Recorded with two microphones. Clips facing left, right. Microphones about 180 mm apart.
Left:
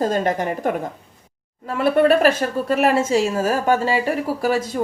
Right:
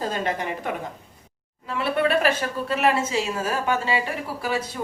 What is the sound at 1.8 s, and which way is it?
Speech, 45° left (ahead or behind).